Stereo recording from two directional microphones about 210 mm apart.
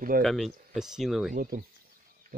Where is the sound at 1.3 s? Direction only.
45° right (ahead or behind).